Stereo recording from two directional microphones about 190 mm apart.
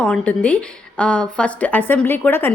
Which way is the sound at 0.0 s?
5° left (ahead or behind).